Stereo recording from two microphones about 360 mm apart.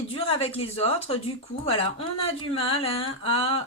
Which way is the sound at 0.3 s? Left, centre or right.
Centre.